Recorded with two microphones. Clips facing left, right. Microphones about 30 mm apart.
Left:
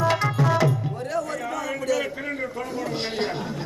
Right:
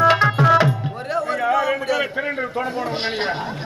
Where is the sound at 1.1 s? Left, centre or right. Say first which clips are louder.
Right 10 dB; right.